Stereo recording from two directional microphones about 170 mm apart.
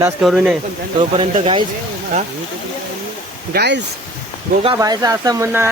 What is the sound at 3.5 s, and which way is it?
Speech, 80° right.